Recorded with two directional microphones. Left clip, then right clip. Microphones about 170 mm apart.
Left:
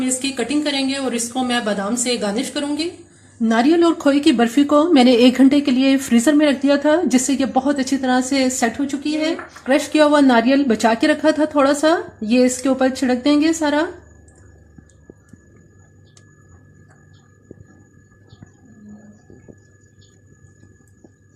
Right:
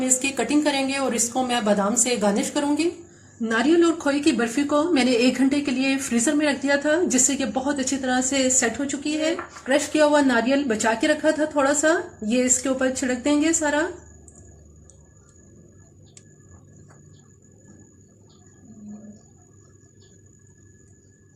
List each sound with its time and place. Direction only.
0.0 s speech: 5° left (ahead or behind)
3.5 s speech: 40° left (ahead or behind)
9.6 s a woman's voice: 55° left (ahead or behind)